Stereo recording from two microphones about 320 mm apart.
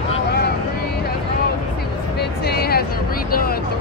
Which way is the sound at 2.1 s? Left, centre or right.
Left.